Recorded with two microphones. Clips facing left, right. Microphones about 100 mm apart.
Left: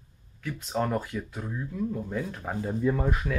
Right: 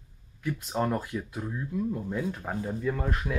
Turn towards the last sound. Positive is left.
turn(degrees=5)  # may be behind; listen again after turning